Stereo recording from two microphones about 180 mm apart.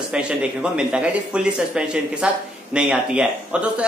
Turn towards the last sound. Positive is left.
turn(degrees=-5)  # may be behind; listen again after turning